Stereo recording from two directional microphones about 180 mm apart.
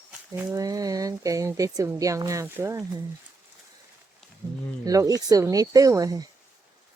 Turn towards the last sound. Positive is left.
turn(degrees=-20)  # may be behind; listen again after turning